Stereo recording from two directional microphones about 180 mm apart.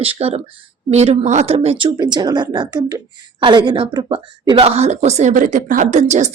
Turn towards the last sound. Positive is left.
turn(degrees=-40)  # may be behind; listen again after turning